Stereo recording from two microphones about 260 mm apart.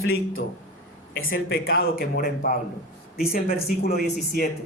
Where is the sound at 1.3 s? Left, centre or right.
Left.